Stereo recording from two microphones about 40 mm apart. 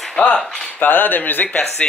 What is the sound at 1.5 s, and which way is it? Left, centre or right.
Speech, left.